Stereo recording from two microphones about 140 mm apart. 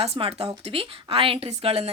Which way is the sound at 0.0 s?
45° right (ahead or behind).